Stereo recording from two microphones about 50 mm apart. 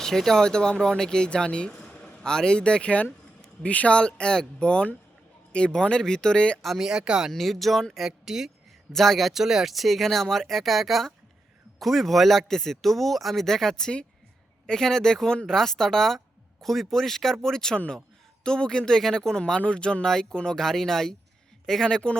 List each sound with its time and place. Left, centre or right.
0.0 s speech: centre
6.7 s speech: centre
7.3 s speech: centre
8.9 s speech: centre